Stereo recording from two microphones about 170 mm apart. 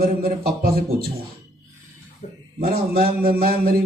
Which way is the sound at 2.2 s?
50° left (ahead or behind).